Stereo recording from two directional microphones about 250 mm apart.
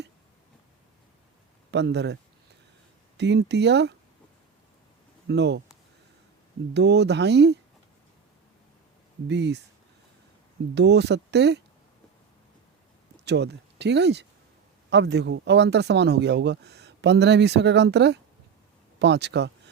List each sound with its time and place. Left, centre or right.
1.7 s speech: right
3.2 s speech: right
5.3 s speech: right
6.7 s speech: right
9.2 s speech: right
10.8 s speech: right
13.2 s speech: right